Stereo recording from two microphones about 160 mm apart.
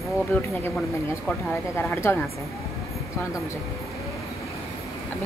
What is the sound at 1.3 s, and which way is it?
Speech, 15° left (ahead or behind).